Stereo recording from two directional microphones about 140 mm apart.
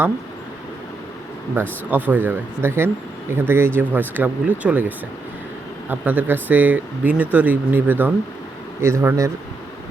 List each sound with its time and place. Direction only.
1.6 s speech: 15° right (ahead or behind)